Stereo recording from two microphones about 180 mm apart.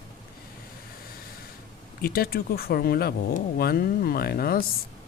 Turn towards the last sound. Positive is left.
turn(degrees=55)  # may be behind; listen again after turning